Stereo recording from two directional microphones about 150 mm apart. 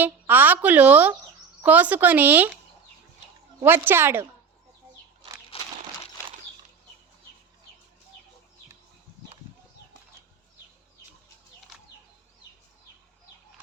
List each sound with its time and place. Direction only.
0.0 s a woman's voice: 10° right (ahead or behind)
3.6 s a woman's voice: 15° right (ahead or behind)
5.5 s crumpling: 40° left (ahead or behind)